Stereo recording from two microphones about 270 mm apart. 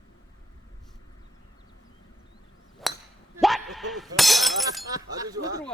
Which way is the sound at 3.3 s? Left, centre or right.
Centre.